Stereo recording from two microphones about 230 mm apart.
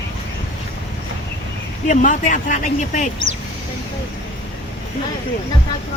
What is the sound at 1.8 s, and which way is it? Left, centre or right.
Speech, left.